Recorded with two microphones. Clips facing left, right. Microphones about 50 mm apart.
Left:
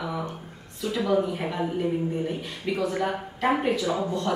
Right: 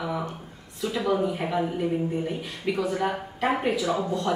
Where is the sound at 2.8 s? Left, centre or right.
Centre.